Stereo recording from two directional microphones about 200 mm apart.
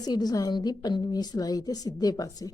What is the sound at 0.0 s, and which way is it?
Speech, 20° left (ahead or behind).